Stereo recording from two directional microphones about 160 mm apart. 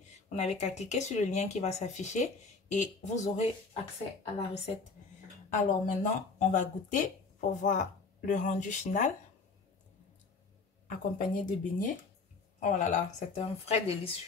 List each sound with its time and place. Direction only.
0.3 s a woman's voice: 45° left (ahead or behind)
10.9 s a woman's voice: 55° left (ahead or behind)